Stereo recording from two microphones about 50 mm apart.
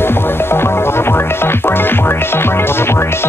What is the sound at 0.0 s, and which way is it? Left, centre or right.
Music, left.